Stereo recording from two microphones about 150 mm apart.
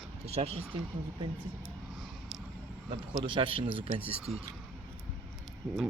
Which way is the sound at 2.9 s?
35° right (ahead or behind).